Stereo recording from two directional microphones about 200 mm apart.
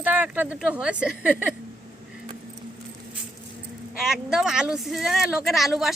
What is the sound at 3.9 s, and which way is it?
Speech, centre (ahead or behind).